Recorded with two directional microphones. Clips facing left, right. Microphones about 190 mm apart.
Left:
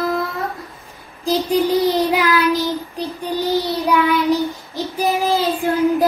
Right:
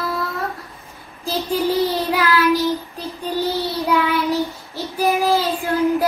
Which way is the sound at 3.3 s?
15° left (ahead or behind).